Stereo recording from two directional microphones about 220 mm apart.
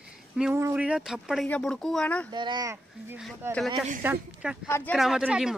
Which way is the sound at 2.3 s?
20° right (ahead or behind).